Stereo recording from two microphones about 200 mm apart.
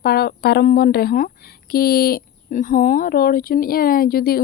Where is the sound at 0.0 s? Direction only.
50° left (ahead or behind).